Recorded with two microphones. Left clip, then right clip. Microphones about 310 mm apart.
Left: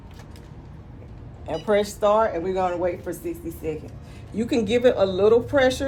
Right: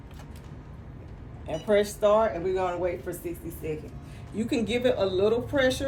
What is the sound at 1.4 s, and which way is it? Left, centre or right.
A woman's voice, centre.